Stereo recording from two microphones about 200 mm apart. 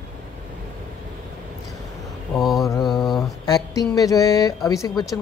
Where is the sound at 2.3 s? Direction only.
Centre (ahead or behind).